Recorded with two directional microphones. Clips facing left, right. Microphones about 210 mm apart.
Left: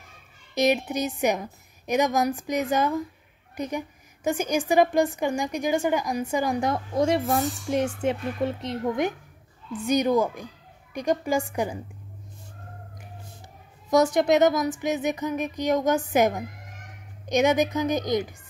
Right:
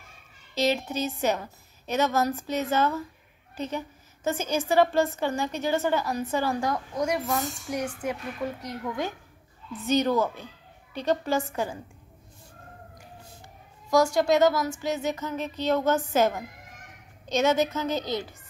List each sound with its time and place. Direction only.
0.6 s a woman's voice: 15° left (ahead or behind)
13.8 s a woman's voice: 20° left (ahead or behind)